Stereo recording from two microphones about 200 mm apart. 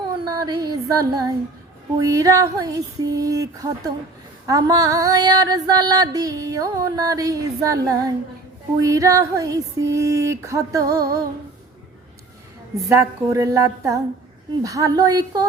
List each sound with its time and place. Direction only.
0.3 s female singing: 20° right (ahead or behind)
12.9 s female singing: 15° right (ahead or behind)